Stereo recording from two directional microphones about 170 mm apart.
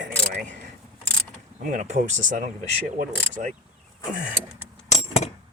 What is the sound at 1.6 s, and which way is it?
Speech, 45° right (ahead or behind).